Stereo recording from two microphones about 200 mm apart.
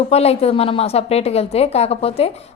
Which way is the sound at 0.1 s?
30° left (ahead or behind).